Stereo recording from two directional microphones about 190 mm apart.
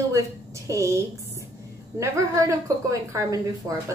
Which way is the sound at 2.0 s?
15° right (ahead or behind).